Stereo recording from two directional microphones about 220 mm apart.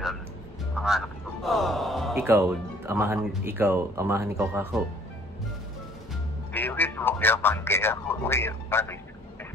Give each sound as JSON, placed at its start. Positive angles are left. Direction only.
{"t": 0.7, "sound": "music", "side_deg": 0}
{"t": 2.1, "sound": "speech", "side_deg": -10}
{"t": 6.5, "sound": "speech", "side_deg": 10}